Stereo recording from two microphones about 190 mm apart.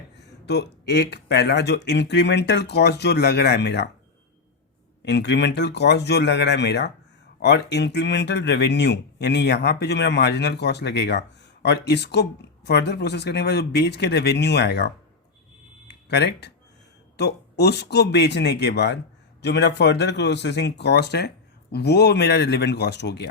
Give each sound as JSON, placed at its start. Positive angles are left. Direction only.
{"t": 0.4, "sound": "speech", "side_deg": 60}
{"t": 5.0, "sound": "speech", "side_deg": 65}